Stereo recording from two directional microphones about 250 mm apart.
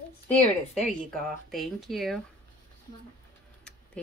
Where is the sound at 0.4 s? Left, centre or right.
Left.